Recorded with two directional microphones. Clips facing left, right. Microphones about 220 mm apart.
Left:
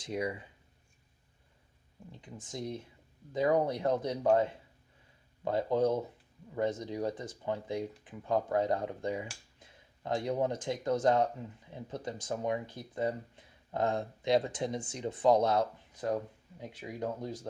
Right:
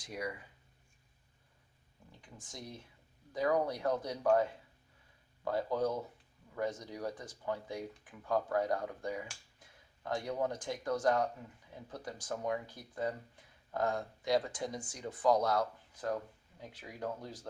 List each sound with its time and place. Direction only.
0.0 s speech: 25° left (ahead or behind)
2.2 s speech: 25° left (ahead or behind)